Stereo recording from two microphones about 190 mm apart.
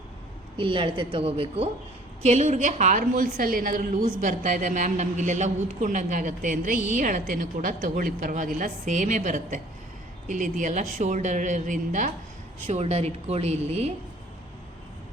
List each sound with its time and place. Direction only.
0.5 s a woman's voice: 25° right (ahead or behind)